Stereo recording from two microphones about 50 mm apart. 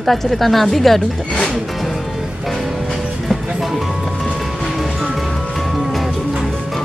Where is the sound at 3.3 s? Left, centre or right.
Centre.